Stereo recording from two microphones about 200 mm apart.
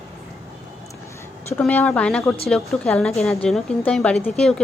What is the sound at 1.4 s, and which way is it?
A woman's voice, 10° left (ahead or behind).